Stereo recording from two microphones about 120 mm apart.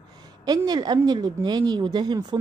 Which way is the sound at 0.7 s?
35° right (ahead or behind).